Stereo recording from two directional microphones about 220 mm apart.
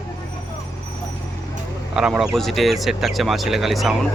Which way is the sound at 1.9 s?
5° right (ahead or behind).